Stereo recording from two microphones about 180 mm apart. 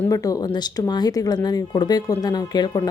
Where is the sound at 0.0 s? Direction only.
20° left (ahead or behind).